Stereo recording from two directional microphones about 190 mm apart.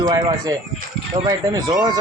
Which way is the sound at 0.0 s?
20° right (ahead or behind).